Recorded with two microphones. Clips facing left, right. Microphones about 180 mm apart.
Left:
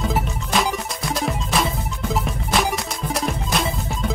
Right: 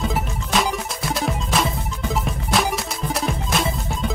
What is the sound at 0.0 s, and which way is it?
Music, centre (ahead or behind).